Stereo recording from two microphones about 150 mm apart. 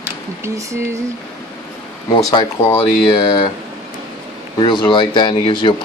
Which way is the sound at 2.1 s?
30° left (ahead or behind).